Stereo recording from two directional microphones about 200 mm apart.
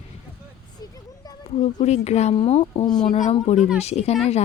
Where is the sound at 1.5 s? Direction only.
35° left (ahead or behind).